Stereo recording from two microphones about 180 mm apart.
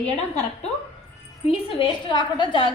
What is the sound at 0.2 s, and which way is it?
A woman's voice, 35° left (ahead or behind).